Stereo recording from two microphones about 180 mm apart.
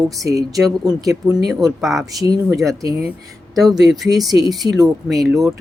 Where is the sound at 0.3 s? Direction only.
20° right (ahead or behind).